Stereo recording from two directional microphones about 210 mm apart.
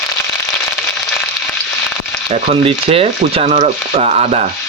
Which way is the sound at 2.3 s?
25° right (ahead or behind).